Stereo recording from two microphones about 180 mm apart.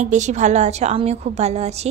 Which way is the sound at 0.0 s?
40° right (ahead or behind).